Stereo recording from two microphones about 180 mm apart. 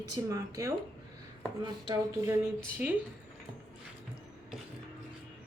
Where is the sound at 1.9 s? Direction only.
15° right (ahead or behind).